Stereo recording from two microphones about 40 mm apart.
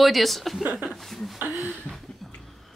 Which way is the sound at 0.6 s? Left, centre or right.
Right.